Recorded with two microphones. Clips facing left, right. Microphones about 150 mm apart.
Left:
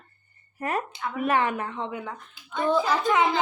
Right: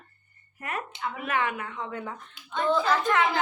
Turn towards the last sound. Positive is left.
turn(degrees=15)  # may be behind; listen again after turning